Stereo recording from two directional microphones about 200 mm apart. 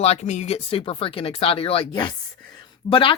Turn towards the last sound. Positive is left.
turn(degrees=25)  # may be behind; listen again after turning